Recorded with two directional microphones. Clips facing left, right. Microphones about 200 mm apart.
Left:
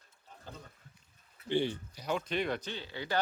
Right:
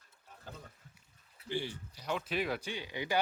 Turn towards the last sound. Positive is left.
turn(degrees=-15)  # may be behind; listen again after turning